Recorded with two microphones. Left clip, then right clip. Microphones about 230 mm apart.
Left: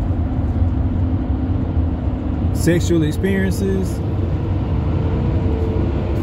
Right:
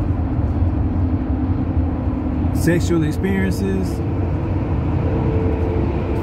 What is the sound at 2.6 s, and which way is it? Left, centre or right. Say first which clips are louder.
Speech: left 2 dB; centre.